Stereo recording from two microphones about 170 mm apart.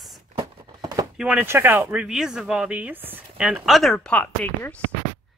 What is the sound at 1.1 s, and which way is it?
Speech, 5° right (ahead or behind).